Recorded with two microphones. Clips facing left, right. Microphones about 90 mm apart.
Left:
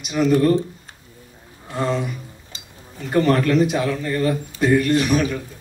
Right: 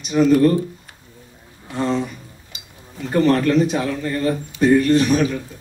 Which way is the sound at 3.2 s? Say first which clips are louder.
Right 1 dB; 35° right (ahead or behind).